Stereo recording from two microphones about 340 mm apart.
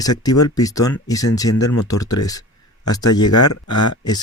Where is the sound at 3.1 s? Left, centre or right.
Left.